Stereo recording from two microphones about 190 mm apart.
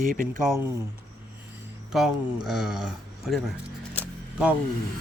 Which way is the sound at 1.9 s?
Centre (ahead or behind).